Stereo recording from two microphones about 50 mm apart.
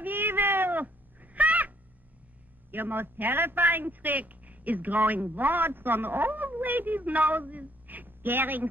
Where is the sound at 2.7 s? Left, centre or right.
Right.